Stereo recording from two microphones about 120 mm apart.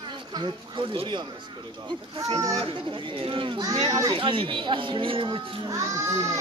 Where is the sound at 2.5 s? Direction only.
50° right (ahead or behind).